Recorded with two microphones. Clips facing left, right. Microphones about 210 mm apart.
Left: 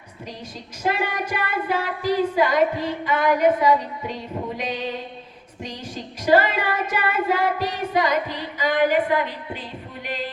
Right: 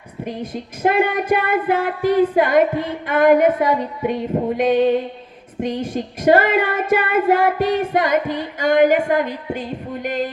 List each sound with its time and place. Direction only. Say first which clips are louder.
0.3 s music: right 10 dB; 55° right (ahead or behind)